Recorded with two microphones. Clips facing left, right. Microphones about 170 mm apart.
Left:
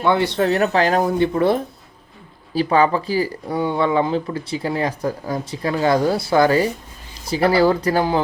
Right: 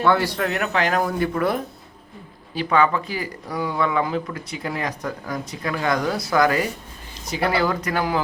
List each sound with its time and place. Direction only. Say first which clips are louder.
0.0 s speech: left 2 dB; 20° left (ahead or behind)